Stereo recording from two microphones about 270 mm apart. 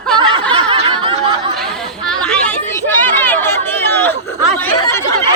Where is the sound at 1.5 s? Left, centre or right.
Centre.